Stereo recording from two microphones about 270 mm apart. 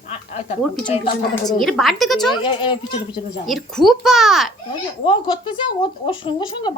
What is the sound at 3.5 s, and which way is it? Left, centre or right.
A woman's voice, centre.